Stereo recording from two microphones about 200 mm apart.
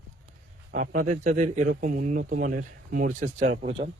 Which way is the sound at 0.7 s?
40° right (ahead or behind).